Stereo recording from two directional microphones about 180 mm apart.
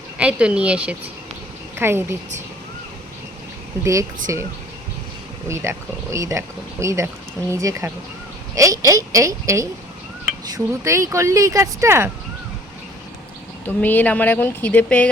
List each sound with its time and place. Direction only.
0.2 s a woman's voice: 5° right (ahead or behind)
4.3 s speech: 15° right (ahead or behind)
5.5 s speech: 15° right (ahead or behind)
13.7 s speech: 10° left (ahead or behind)